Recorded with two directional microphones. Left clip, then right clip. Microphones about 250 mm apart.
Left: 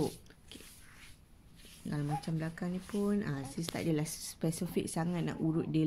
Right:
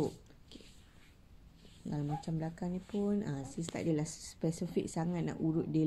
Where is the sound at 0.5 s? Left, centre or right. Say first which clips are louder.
Left 3 dB; left.